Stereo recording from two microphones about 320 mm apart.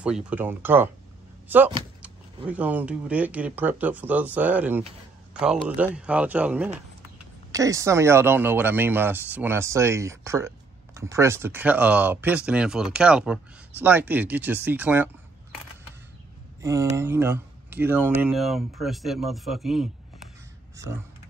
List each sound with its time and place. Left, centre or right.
0.0 s a man's voice: centre
16.6 s speech: centre